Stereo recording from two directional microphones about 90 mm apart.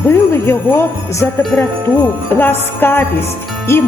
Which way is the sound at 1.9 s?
35° left (ahead or behind).